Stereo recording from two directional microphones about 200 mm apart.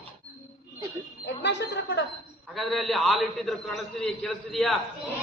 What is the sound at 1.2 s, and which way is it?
Speech, 60° left (ahead or behind).